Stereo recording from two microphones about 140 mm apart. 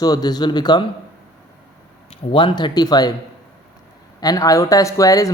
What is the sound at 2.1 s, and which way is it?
Speech, 40° left (ahead or behind).